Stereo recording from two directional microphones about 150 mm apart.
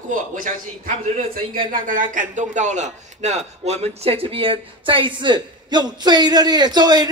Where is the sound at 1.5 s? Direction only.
60° right (ahead or behind).